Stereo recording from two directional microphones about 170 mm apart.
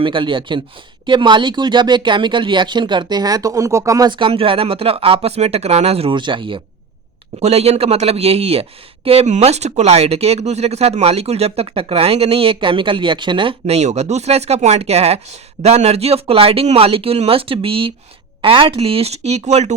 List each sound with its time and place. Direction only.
0.0 s speech: 30° right (ahead or behind)